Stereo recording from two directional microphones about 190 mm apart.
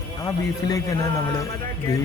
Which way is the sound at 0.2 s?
20° left (ahead or behind).